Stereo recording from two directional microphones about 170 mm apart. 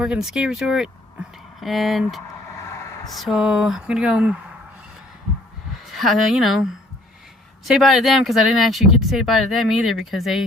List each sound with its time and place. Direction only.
0.0 s speech: 5° right (ahead or behind)
5.7 s a woman's voice: centre (ahead or behind)